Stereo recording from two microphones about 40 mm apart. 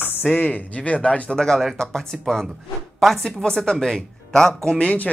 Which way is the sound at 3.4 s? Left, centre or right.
Centre.